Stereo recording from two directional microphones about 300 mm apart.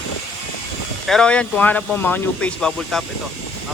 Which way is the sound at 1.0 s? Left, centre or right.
Centre.